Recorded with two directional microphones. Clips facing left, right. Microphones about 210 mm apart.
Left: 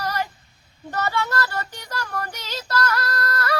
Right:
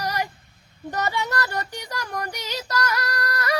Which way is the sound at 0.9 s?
15° right (ahead or behind).